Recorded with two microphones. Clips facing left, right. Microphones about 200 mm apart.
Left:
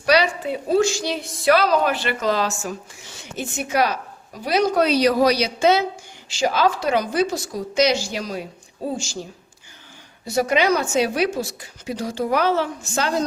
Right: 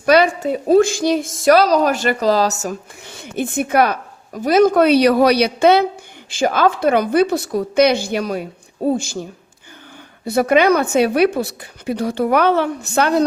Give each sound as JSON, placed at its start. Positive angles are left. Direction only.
{"t": 0.0, "sound": "a woman's voice", "side_deg": -50}
{"t": 3.0, "sound": "a woman's voice", "side_deg": -55}
{"t": 10.2, "sound": "a woman's voice", "side_deg": -55}